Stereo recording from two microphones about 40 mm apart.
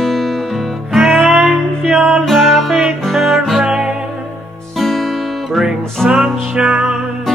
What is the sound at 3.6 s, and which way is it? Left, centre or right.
Music, right.